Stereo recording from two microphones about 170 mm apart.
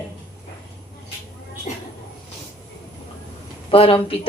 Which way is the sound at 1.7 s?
45° left (ahead or behind).